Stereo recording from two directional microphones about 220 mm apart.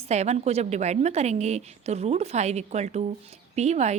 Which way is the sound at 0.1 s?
30° right (ahead or behind).